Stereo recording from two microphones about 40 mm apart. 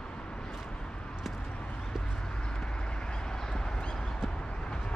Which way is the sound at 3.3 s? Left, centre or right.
Centre.